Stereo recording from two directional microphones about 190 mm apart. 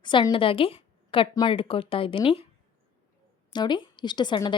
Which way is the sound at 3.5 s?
25° left (ahead or behind).